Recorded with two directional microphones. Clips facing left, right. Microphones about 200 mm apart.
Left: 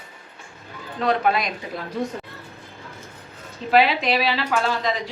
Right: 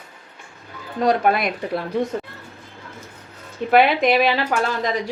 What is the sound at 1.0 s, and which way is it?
Speech, 45° right (ahead or behind).